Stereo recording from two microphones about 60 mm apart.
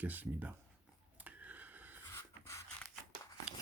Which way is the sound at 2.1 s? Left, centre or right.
Left.